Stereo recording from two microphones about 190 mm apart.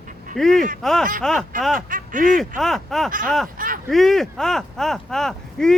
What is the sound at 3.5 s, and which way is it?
Speech, 45° right (ahead or behind).